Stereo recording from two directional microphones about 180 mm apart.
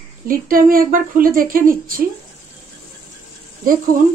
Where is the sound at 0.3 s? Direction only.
50° right (ahead or behind).